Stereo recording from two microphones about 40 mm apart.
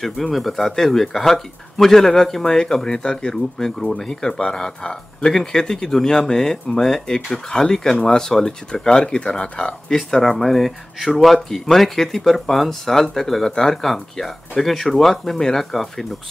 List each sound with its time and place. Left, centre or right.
0.0 s speech: centre; by 9.9 s left
9.9 s speech: centre